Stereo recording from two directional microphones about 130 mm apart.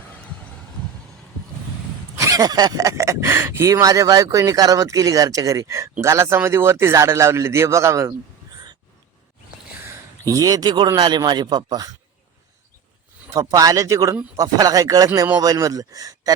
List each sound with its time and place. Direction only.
2.1 s speech: 25° right (ahead or behind)
9.9 s a man's voice: 25° right (ahead or behind)
13.3 s speech: 25° right (ahead or behind)